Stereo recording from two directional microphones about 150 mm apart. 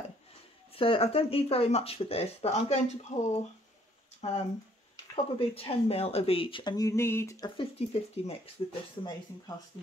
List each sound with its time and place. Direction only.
0.7 s speech: 35° left (ahead or behind)
7.7 s speech: 40° left (ahead or behind)